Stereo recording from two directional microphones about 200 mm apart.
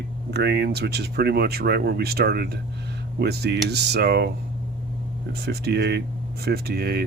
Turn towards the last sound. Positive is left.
turn(degrees=-50)  # may be behind; listen again after turning